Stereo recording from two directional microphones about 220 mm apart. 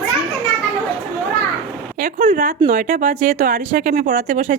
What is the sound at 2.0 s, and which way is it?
Speech, 40° right (ahead or behind).